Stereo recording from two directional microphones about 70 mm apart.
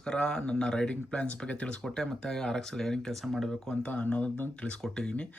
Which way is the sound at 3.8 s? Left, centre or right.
Centre.